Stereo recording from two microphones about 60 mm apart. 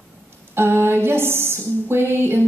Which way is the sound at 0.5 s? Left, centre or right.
Right.